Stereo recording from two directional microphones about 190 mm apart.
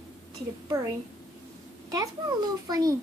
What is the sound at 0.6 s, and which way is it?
Speech, 20° right (ahead or behind).